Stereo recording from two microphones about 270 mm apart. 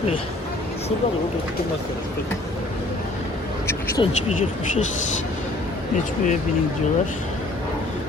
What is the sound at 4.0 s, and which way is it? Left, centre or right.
Speech, centre.